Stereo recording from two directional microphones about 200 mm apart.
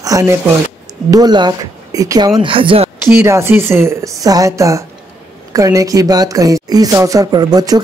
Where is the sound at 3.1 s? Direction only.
10° right (ahead or behind).